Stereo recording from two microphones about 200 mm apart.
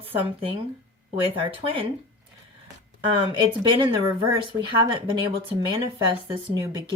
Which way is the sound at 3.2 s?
25° right (ahead or behind).